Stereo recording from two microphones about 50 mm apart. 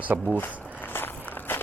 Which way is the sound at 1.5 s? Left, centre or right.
Left.